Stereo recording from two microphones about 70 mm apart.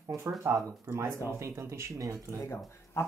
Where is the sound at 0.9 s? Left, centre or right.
Right.